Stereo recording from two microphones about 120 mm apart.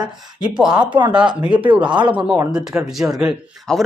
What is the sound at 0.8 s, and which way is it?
Speech, 40° right (ahead or behind).